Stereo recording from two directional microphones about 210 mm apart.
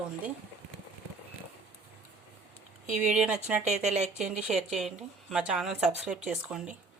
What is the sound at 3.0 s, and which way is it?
Speech, 5° right (ahead or behind).